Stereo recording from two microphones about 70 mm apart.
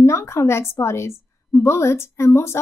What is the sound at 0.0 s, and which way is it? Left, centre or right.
A woman's voice, left.